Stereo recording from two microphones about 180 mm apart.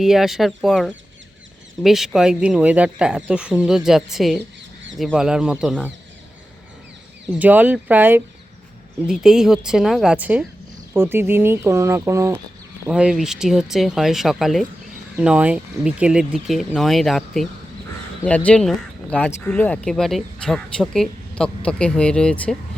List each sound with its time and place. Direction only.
0.0 s speech: centre (ahead or behind)
7.3 s speech: 10° right (ahead or behind)
12.9 s speech: 5° right (ahead or behind)